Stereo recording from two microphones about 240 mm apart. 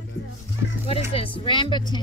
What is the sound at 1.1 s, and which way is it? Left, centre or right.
Speech, left.